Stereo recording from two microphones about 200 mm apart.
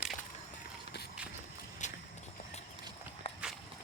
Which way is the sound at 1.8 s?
35° left (ahead or behind).